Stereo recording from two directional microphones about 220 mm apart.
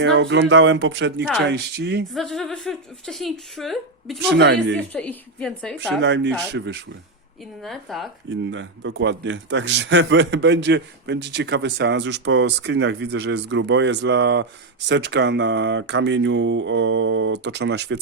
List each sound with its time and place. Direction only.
0.0 s a man's voice: 50° right (ahead or behind)
2.1 s speech: centre (ahead or behind)
4.3 s a man's voice: 50° right (ahead or behind)
4.9 s speech: 5° left (ahead or behind)
6.0 s a man's voice: 55° right (ahead or behind)
7.6 s speech: centre (ahead or behind)
8.3 s a man's voice: 55° right (ahead or behind)